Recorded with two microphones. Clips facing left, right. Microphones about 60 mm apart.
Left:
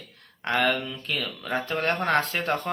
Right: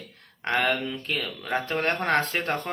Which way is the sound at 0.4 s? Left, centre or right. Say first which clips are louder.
Even; right.